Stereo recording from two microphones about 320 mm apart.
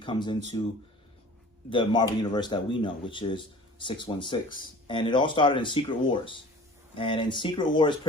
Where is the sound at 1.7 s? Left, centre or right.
Centre.